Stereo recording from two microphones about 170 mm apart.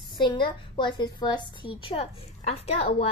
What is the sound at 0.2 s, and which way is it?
A woman's voice, 30° left (ahead or behind).